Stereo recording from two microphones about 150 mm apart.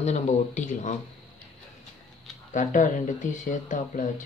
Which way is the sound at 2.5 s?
55° left (ahead or behind).